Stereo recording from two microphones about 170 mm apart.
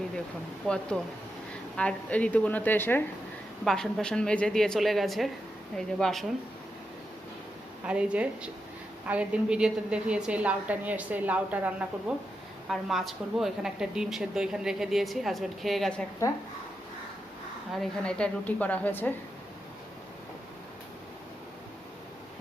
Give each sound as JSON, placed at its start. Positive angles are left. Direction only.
{"t": 0.7, "sound": "a woman's voice", "side_deg": 0}
{"t": 3.6, "sound": "a woman's voice", "side_deg": 0}
{"t": 7.9, "sound": "a woman's voice", "side_deg": -5}
{"t": 16.2, "sound": "speech", "side_deg": 20}
{"t": 17.7, "sound": "a woman's voice", "side_deg": 5}